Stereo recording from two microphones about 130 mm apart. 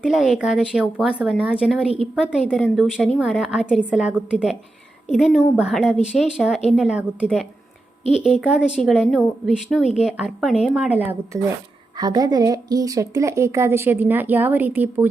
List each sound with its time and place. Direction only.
0.0 s a woman's voice: 5° right (ahead or behind)
11.9 s speech: 30° right (ahead or behind); by 15.0 s 15° right (ahead or behind)